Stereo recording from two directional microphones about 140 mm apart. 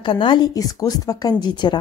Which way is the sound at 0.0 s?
35° left (ahead or behind).